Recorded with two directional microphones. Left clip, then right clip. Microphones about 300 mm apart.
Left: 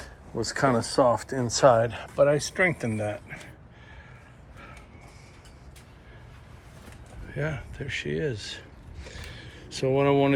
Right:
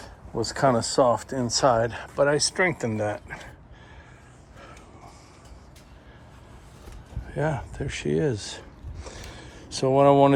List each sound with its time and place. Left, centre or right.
0.3 s speech: centre
7.3 s speech: centre
9.0 s a sound: centre